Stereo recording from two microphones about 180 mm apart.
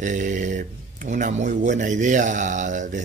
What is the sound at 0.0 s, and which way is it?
Speech, 45° right (ahead or behind).